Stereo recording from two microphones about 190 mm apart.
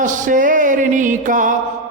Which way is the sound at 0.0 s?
40° right (ahead or behind).